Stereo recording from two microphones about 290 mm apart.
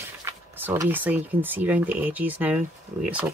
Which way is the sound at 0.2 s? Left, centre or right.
Centre.